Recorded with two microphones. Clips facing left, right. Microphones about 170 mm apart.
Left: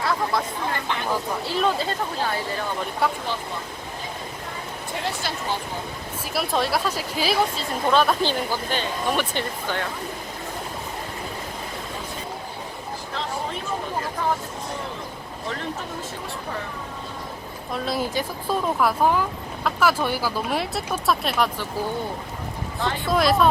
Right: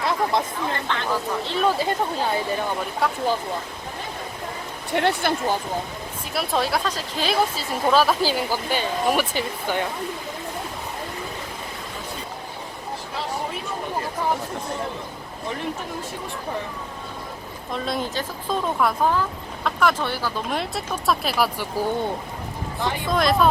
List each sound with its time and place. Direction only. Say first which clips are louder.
0.0 s chatter: right 2 dB; 20° right (ahead or behind)
0.9 s speech: right 1 dB; 15° left (ahead or behind)
1.8 s speech: right 3 dB; 15° right (ahead or behind)
3.0 s speech: left 1 dB; centre (ahead or behind)
4.9 s speech: right 8 dB; 65° right (ahead or behind)
6.3 s speech: even; centre (ahead or behind)
7.5 s speech: right 1 dB; 5° right (ahead or behind)
17.7 s speech: left 1 dB; 5° left (ahead or behind)
23.0 s speech: left 1 dB; centre (ahead or behind)